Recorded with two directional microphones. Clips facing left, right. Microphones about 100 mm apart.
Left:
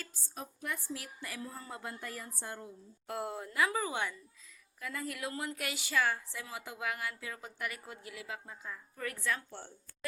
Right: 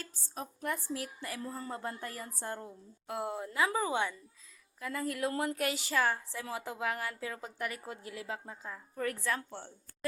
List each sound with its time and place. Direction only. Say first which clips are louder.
0.3 s a woman's voice: right 4 dB; 40° right (ahead or behind)
3.1 s a woman's voice: right 2 dB; 20° right (ahead or behind)